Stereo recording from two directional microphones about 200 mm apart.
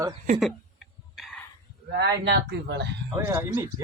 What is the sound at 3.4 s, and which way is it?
Speech, 10° right (ahead or behind).